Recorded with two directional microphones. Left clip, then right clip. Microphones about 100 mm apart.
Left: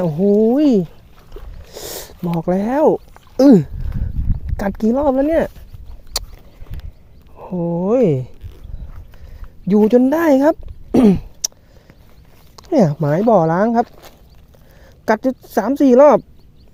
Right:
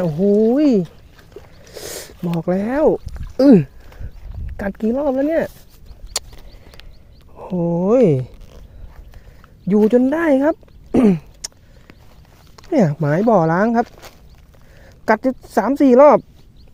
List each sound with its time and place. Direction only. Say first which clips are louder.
0.0 s speech: left 1 dB; 20° left (ahead or behind)
1.7 s a sound: left 1 dB; 25° left (ahead or behind)
2.4 s speech: left 2 dB; 25° left (ahead or behind)
3.3 s speech: left 1 dB; 50° left (ahead or behind)
6.1 s a sound: left 1 dB; 10° left (ahead or behind)
7.3 s speech: right 1 dB; 10° right (ahead or behind)
9.6 s speech: left 2 dB; 30° left (ahead or behind)
12.5 s speech: left 2 dB; 20° left (ahead or behind)
13.8 s speech: right 1 dB; 35° right (ahead or behind)
14.8 s speech: even; 15° left (ahead or behind)